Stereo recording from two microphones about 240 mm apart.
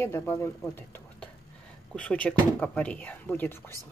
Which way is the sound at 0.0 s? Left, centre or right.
Centre.